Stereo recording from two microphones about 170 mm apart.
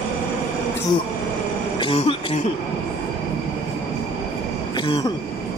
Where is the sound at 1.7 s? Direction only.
30° left (ahead or behind).